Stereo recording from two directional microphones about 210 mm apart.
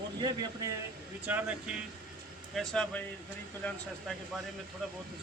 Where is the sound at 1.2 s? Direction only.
10° right (ahead or behind).